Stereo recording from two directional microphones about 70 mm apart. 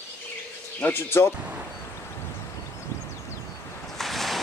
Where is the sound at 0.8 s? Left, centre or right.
Left.